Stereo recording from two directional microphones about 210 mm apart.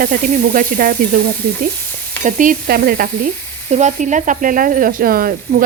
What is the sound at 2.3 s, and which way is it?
Stir, 40° right (ahead or behind).